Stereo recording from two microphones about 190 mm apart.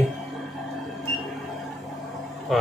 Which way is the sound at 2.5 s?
Centre (ahead or behind).